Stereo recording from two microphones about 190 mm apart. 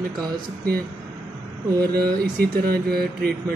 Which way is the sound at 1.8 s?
55° right (ahead or behind).